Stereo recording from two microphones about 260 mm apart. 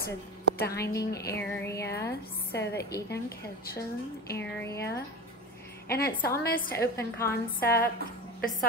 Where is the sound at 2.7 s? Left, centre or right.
Left.